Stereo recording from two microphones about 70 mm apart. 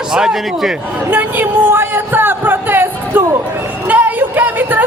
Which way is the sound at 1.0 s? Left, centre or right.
Right.